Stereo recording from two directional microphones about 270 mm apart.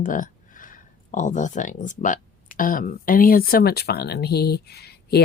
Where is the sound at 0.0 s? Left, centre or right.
Left.